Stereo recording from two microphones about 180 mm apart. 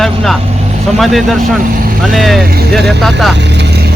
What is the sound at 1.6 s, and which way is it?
Speech, 50° right (ahead or behind).